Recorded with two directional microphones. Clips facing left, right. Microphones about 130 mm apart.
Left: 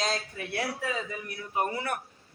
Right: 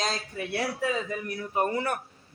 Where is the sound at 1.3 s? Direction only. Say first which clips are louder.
Right 3 dB; 40° right (ahead or behind).